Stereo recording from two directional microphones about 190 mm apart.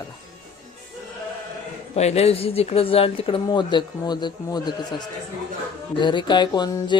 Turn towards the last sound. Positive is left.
turn(degrees=25)  # may be behind; listen again after turning